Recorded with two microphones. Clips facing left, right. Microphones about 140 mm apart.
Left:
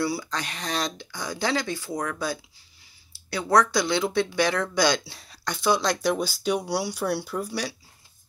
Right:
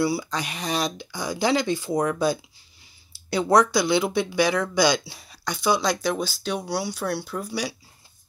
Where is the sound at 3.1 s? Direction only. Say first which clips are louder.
Right 3 dB; 20° right (ahead or behind).